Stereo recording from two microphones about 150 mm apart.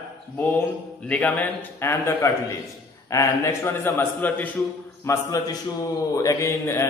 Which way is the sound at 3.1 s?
20° left (ahead or behind).